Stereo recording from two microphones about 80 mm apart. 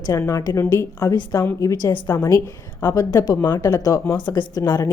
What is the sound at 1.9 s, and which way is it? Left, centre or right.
Speech, left.